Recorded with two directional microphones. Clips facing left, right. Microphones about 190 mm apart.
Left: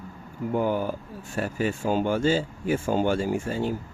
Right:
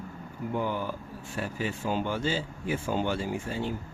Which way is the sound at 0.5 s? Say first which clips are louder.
Left 6 dB; 45° left (ahead or behind).